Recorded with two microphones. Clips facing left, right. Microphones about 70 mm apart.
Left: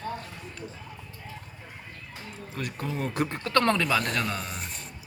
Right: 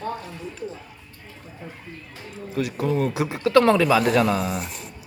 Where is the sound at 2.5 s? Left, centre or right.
Centre.